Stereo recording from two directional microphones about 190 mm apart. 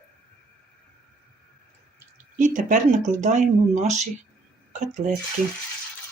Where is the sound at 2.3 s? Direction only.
40° right (ahead or behind).